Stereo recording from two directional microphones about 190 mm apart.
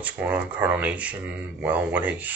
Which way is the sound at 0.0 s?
10° right (ahead or behind).